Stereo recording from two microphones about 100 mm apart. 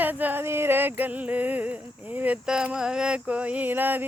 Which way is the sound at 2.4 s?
10° right (ahead or behind).